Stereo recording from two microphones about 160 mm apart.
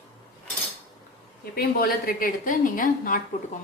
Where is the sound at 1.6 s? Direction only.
70° left (ahead or behind).